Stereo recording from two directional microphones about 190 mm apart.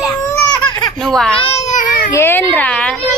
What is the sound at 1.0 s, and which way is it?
Speech, 5° left (ahead or behind).